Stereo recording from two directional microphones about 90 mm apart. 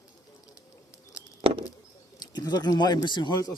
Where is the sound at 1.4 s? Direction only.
90° right.